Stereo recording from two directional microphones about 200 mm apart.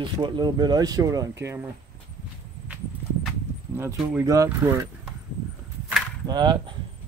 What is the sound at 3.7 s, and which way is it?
Speech, 15° right (ahead or behind).